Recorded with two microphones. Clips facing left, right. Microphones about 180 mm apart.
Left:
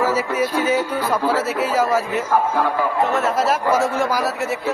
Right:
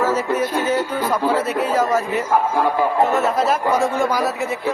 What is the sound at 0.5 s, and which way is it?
Speech, 10° left (ahead or behind).